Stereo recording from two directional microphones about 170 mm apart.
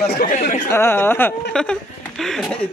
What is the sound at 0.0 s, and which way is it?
Speech, 70° left (ahead or behind).